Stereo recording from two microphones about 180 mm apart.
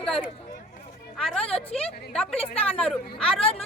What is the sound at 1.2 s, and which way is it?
Music, centre (ahead or behind).